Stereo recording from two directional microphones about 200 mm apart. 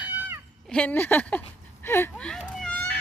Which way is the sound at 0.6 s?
5° left (ahead or behind).